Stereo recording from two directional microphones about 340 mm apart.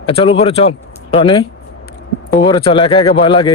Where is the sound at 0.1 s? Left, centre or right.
Centre.